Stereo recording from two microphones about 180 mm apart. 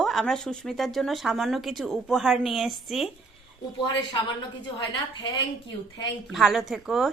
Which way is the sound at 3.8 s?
25° left (ahead or behind).